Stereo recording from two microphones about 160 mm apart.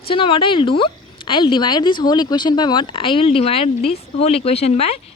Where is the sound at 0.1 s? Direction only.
35° left (ahead or behind).